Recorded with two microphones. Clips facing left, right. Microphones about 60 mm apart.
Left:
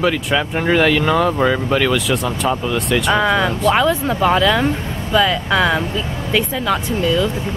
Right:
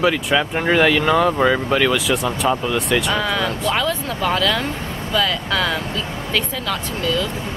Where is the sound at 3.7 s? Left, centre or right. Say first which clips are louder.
Left 6 dB; centre.